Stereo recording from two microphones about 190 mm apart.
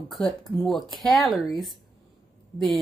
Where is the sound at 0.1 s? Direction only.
Centre (ahead or behind).